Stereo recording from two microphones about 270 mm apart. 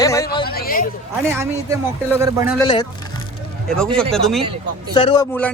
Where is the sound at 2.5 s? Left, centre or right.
Centre.